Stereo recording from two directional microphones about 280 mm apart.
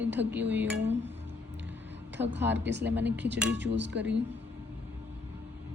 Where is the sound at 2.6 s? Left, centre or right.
Right.